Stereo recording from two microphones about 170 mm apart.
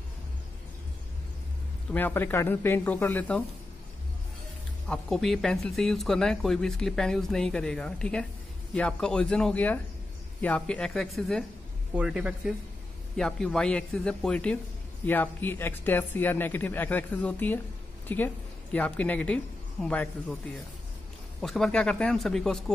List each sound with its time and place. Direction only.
1.9 s speech: 10° left (ahead or behind)
4.8 s a woman's voice: 5° left (ahead or behind)